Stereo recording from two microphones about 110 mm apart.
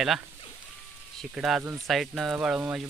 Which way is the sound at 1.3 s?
5° right (ahead or behind).